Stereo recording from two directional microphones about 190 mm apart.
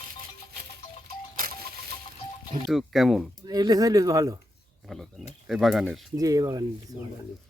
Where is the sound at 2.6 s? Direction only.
Centre (ahead or behind).